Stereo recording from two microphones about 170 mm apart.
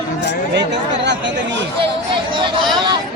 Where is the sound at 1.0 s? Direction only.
90° right.